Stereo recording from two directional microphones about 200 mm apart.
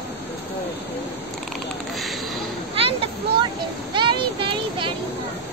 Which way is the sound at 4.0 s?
25° right (ahead or behind).